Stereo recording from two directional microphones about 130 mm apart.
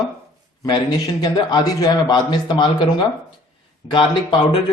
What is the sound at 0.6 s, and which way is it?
A man's voice, 30° left (ahead or behind).